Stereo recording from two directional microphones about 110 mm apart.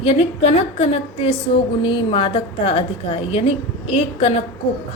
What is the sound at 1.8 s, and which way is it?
A woman's voice, 50° left (ahead or behind).